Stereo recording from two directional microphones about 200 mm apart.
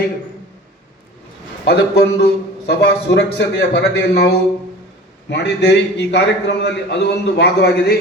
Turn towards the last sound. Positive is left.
turn(degrees=55)  # may be behind; listen again after turning